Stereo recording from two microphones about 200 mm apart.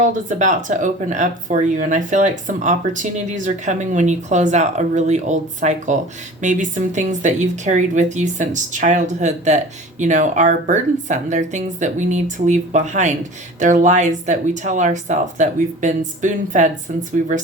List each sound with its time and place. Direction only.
0.0 s speech: 40° right (ahead or behind)